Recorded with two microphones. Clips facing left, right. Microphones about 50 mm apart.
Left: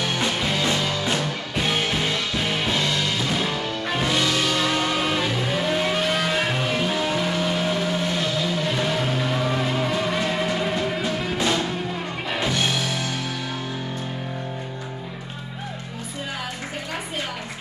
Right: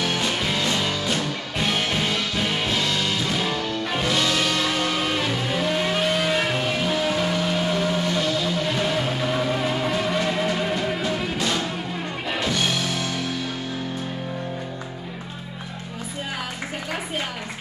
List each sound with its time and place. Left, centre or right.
0.4 s music: centre
8.0 s vehicle: centre
11.3 s music: centre